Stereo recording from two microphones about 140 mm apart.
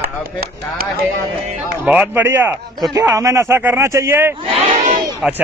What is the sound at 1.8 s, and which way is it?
Speech, 10° right (ahead or behind).